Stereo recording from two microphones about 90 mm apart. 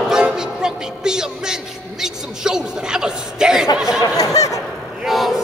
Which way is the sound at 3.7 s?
5° right (ahead or behind).